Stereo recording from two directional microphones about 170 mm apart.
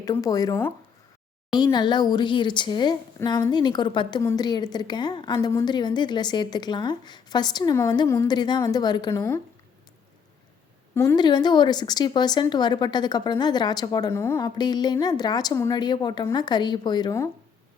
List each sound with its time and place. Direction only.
0.0 s a woman's voice: 20° left (ahead or behind)
10.9 s a woman's voice: 20° left (ahead or behind)